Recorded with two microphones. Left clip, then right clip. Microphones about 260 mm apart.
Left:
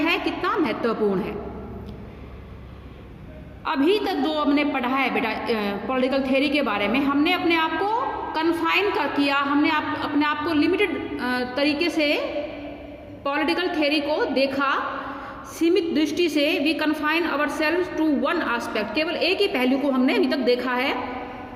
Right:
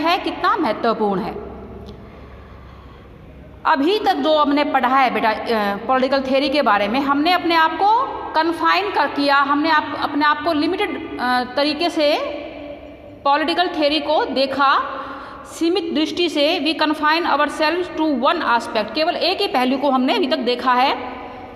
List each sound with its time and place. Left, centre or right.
0.0 s a woman's voice: centre
3.6 s a woman's voice: centre
13.2 s a woman's voice: centre